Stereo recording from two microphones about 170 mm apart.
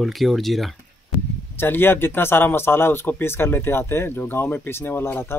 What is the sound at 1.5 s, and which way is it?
Speech, 10° left (ahead or behind).